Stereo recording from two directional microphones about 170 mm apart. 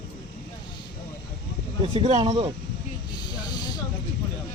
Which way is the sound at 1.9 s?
40° right (ahead or behind).